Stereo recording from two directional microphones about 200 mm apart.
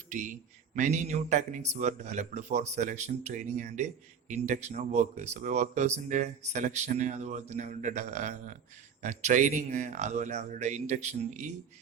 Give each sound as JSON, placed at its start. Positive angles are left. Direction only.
{"t": 0.1, "sound": "a man's voice", "side_deg": -35}